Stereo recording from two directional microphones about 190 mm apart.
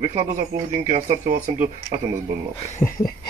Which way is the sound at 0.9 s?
40° right (ahead or behind).